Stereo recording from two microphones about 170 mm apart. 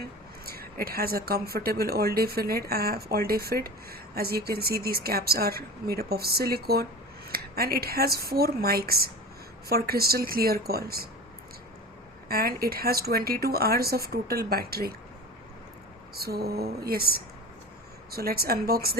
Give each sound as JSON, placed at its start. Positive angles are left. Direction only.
{"t": 0.4, "sound": "speech", "side_deg": -60}
{"t": 12.3, "sound": "speech", "side_deg": -60}
{"t": 16.1, "sound": "a sound", "side_deg": -65}
{"t": 18.1, "sound": "speech", "side_deg": -65}